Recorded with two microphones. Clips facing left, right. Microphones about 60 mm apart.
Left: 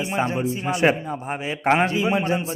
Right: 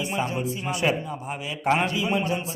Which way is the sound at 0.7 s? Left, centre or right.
Left.